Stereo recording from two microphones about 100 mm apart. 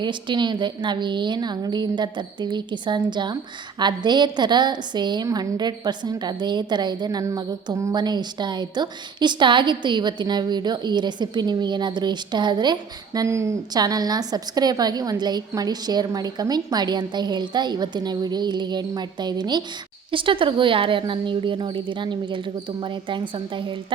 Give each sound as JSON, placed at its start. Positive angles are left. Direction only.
{"t": 0.0, "sound": "a woman's voice", "side_deg": -50}
{"t": 7.9, "sound": "a woman's voice", "side_deg": -45}
{"t": 13.2, "sound": "a woman's voice", "side_deg": -30}
{"t": 13.7, "sound": "a woman's voice", "side_deg": -40}
{"t": 20.1, "sound": "a woman's voice", "side_deg": -60}